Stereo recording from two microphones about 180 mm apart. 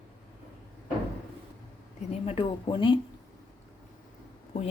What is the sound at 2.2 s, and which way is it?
Speech, 30° left (ahead or behind).